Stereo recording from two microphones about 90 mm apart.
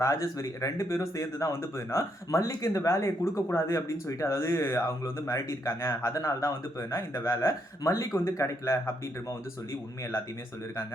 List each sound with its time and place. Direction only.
0.0 s speech: 35° left (ahead or behind)